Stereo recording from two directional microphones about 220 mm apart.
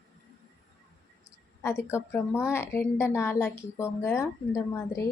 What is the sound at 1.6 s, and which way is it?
A woman's voice, 10° left (ahead or behind).